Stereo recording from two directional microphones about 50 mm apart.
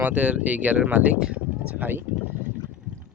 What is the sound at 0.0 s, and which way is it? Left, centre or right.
Speech, right.